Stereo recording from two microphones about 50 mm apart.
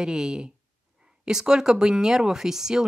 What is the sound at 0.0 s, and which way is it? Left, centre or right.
Speech, centre.